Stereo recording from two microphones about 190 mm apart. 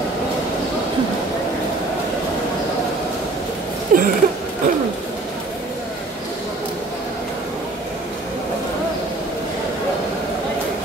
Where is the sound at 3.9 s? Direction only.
45° right (ahead or behind).